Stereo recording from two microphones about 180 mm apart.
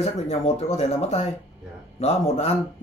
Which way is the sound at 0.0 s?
35° left (ahead or behind).